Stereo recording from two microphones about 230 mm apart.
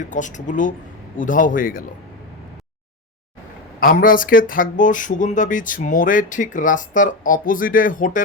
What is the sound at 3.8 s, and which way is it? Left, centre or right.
Speech, left.